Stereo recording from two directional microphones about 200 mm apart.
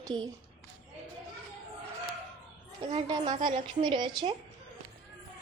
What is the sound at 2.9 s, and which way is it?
A woman's voice, 30° right (ahead or behind).